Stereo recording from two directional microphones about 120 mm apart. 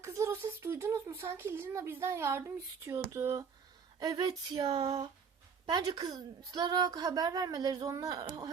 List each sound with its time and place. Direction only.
0.0 s speech: 25° right (ahead or behind)
4.0 s a woman's voice: 35° right (ahead or behind)